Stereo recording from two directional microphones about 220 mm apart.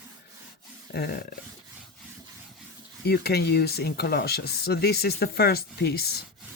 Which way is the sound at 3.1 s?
45° left (ahead or behind).